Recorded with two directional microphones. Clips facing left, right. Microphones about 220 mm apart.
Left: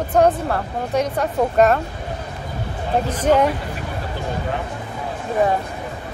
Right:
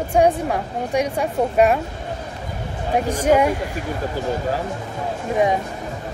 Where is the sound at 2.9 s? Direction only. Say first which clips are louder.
Even; 10° right (ahead or behind).